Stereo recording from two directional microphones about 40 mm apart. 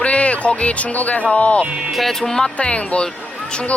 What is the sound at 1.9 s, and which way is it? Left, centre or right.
Speech, centre.